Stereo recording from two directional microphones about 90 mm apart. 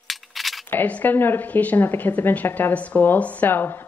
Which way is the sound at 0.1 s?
Centre (ahead or behind).